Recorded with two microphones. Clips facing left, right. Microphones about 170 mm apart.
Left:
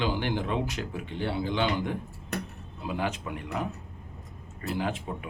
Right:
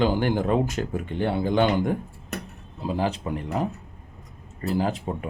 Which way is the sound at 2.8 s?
35° right (ahead or behind).